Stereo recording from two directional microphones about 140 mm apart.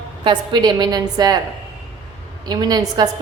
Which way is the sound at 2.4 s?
30° right (ahead or behind).